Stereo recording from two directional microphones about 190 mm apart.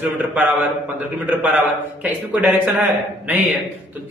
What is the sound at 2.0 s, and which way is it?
A man's voice, 5° right (ahead or behind).